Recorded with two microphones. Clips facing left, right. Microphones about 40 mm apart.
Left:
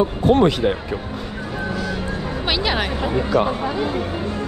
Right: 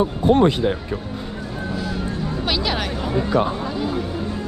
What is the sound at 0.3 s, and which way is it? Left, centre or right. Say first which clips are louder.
Speech: even; left.